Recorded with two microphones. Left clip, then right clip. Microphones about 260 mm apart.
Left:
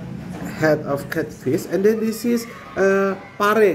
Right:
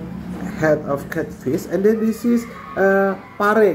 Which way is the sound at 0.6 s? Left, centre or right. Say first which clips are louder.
Right 1 dB; centre.